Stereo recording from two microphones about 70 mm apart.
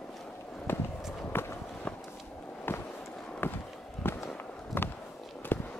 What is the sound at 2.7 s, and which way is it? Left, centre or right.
Walk, left.